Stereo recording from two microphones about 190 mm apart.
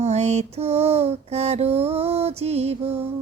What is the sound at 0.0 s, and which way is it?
A woman's voice, 35° right (ahead or behind).